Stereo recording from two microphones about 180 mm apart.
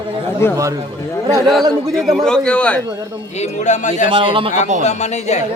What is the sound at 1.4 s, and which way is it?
A man's voice, centre (ahead or behind).